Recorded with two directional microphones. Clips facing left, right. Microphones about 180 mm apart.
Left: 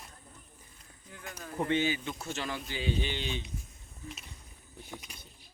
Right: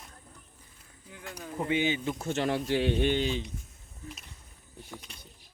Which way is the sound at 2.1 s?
55° right (ahead or behind).